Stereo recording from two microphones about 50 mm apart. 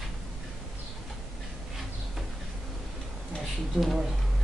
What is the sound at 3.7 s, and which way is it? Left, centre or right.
Speech, centre.